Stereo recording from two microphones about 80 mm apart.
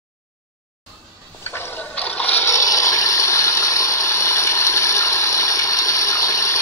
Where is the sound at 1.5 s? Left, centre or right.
Left.